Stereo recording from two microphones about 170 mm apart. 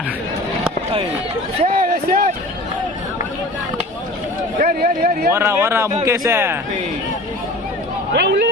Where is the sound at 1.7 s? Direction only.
55° right (ahead or behind).